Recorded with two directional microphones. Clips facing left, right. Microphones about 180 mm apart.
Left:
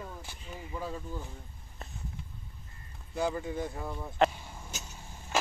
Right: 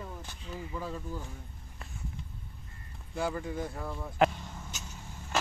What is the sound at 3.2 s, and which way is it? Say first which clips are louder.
Speech: left 1 dB; 20° left (ahead or behind).